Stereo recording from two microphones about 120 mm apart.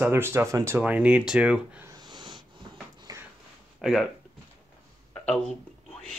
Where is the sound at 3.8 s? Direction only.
5° right (ahead or behind).